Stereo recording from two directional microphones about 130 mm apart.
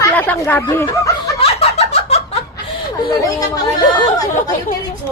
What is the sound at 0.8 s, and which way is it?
Speech, 25° left (ahead or behind).